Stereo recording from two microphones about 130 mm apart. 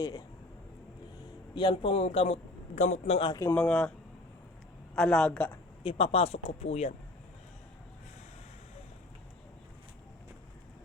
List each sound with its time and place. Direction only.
1.5 s a man's voice: 40° left (ahead or behind); by 3.2 s 60° left (ahead or behind)
3.5 s a woman's voice: 10° left (ahead or behind)
4.9 s a woman's voice: 5° left (ahead or behind)
5.8 s a man's voice: 50° left (ahead or behind)